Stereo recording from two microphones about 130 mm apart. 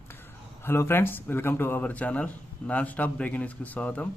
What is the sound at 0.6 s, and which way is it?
A man's voice, 20° left (ahead or behind).